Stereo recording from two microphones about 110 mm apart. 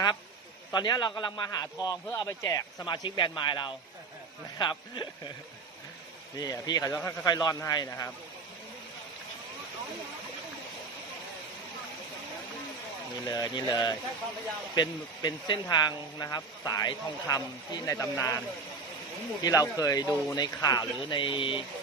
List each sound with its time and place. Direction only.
0.7 s a man's voice: 40° left (ahead or behind)
6.3 s a man's voice: 35° left (ahead or behind)
13.2 s a man's voice: 35° left (ahead or behind)